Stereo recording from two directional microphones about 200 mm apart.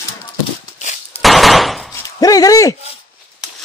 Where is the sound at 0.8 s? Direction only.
35° left (ahead or behind).